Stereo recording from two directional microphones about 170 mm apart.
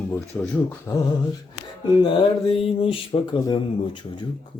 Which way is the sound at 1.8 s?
30° left (ahead or behind).